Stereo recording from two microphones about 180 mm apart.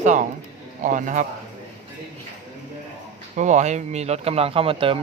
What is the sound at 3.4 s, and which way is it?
Speech, 40° right (ahead or behind).